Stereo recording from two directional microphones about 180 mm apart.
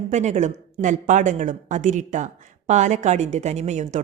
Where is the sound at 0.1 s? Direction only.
40° right (ahead or behind).